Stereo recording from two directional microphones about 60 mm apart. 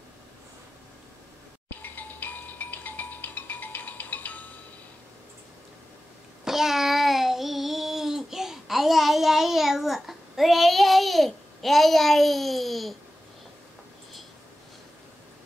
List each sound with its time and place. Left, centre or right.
1.7 s music: left
6.4 s child singing: centre